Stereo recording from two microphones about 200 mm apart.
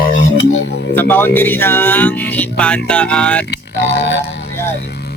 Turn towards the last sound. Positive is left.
turn(degrees=55)  # may be behind; listen again after turning